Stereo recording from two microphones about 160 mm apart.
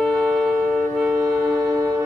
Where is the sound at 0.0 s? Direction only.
5° left (ahead or behind).